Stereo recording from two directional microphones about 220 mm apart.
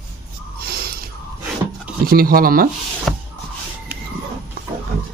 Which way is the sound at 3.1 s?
Centre (ahead or behind).